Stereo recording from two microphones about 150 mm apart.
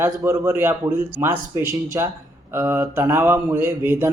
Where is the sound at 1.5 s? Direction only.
20° right (ahead or behind).